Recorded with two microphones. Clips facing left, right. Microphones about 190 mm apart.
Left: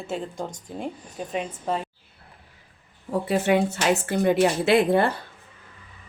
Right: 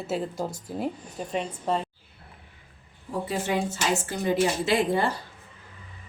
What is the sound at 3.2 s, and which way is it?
A woman's voice, 65° left (ahead or behind).